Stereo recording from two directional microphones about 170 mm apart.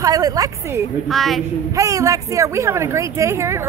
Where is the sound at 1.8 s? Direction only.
20° right (ahead or behind).